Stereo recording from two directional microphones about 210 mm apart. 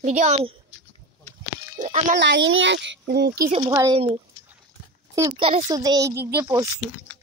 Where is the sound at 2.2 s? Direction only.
60° right (ahead or behind).